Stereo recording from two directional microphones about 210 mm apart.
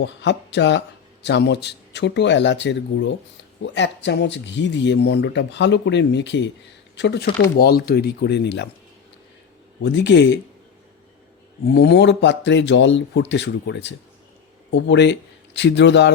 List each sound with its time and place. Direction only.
0.0 s speech: 55° left (ahead or behind)
9.8 s speech: 55° left (ahead or behind)
11.7 s speech: 50° left (ahead or behind)